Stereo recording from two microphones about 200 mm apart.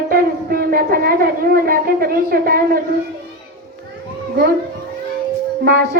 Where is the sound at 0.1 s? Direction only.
45° right (ahead or behind).